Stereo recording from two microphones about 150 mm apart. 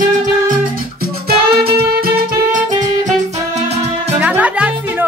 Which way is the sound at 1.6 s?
90° right.